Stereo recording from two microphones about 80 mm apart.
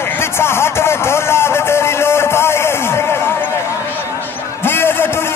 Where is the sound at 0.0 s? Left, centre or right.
Left.